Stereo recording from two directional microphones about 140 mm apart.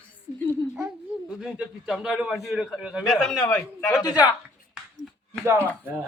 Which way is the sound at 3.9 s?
30° left (ahead or behind).